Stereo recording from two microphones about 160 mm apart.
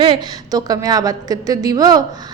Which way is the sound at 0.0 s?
30° right (ahead or behind).